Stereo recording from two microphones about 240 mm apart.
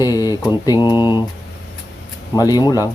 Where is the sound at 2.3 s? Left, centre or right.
Centre.